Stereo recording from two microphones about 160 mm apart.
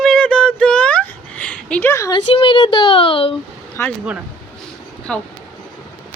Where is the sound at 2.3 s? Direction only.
35° left (ahead or behind).